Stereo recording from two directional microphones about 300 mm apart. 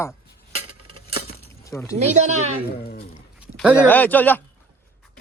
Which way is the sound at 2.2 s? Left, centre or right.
Right.